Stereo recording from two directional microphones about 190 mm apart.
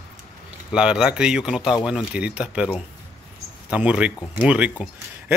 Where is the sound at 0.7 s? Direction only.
5° right (ahead or behind).